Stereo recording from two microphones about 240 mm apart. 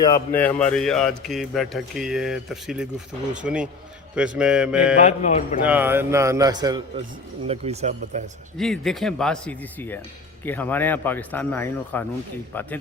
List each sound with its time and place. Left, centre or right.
0.0 s speech: centre
4.9 s speech: left
5.6 s a man's voice: centre; by 8.2 s right
8.5 s speech: centre